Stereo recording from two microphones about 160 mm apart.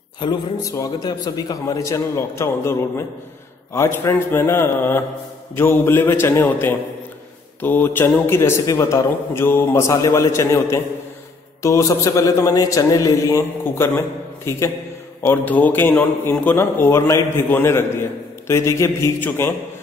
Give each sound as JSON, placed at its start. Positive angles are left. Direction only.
{"t": 0.2, "sound": "a man's voice", "side_deg": 25}